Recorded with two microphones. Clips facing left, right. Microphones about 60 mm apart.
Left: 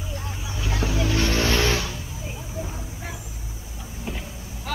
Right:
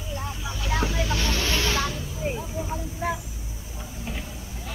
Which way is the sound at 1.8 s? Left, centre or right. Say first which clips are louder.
Right 4 dB; right.